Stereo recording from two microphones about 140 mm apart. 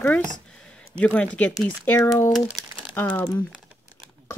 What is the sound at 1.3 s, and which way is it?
Speech, 10° left (ahead or behind).